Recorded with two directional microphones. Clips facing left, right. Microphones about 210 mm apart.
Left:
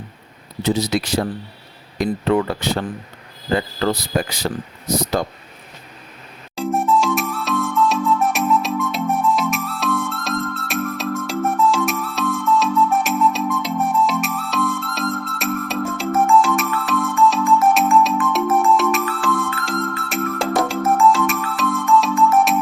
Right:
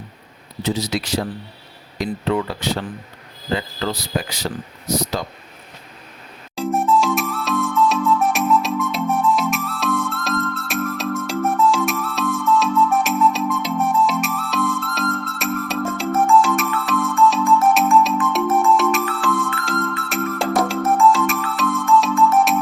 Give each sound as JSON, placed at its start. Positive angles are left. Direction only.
{"t": 0.6, "sound": "speech", "side_deg": 50}
{"t": 6.6, "sound": "music", "side_deg": 0}